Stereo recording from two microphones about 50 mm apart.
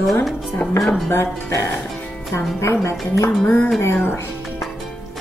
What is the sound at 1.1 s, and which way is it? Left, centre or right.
Speech, left.